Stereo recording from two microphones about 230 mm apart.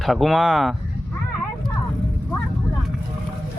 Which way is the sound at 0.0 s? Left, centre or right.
Centre.